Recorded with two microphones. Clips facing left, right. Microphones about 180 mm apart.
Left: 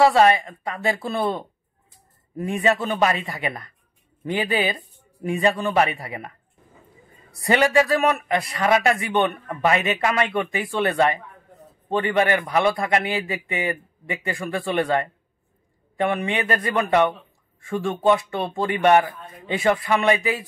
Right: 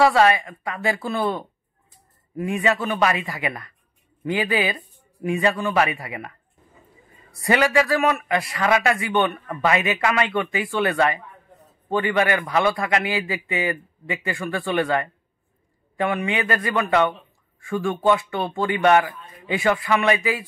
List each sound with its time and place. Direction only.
0.0 s a man's voice: 30° left (ahead or behind)
7.3 s speech: 25° left (ahead or behind)